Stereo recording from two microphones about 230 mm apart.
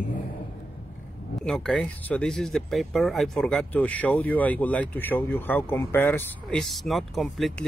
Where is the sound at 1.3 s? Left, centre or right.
Centre.